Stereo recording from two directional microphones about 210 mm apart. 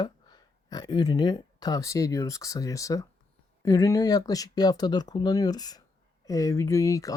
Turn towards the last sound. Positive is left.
turn(degrees=15)  # may be behind; listen again after turning